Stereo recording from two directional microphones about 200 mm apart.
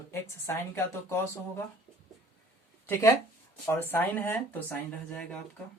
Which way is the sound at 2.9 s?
15° left (ahead or behind).